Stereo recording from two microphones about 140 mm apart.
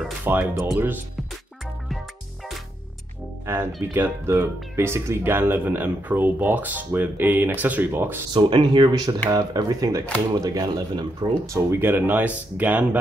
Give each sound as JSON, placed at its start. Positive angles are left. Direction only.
{"t": 0.2, "sound": "speech", "side_deg": -15}
{"t": 3.9, "sound": "speech", "side_deg": -15}
{"t": 8.3, "sound": "speech", "side_deg": -35}